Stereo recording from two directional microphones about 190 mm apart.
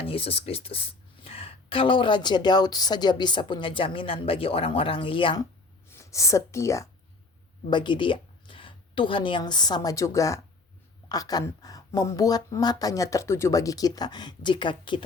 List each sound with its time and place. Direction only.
0.1 s speech: 30° left (ahead or behind)